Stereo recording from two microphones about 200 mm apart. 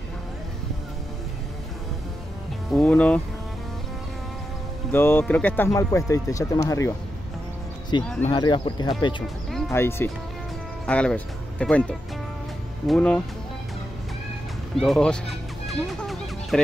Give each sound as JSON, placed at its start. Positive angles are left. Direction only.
{"t": 2.7, "sound": "speech", "side_deg": 5}
{"t": 4.9, "sound": "speech", "side_deg": 10}
{"t": 8.0, "sound": "speech", "side_deg": 5}
{"t": 8.3, "sound": "speech", "side_deg": 25}
{"t": 9.5, "sound": "music", "side_deg": 0}
{"t": 9.8, "sound": "speech", "side_deg": 10}
{"t": 14.8, "sound": "music", "side_deg": 5}